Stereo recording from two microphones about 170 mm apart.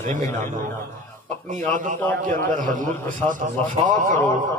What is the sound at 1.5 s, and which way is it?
A man's voice, 45° right (ahead or behind).